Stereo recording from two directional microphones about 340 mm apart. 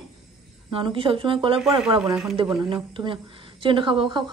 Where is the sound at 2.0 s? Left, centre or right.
Centre.